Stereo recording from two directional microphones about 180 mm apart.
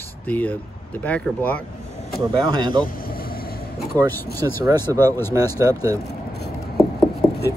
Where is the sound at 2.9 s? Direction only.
55° left (ahead or behind).